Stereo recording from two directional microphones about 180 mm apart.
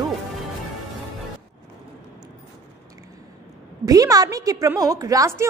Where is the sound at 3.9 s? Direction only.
20° right (ahead or behind).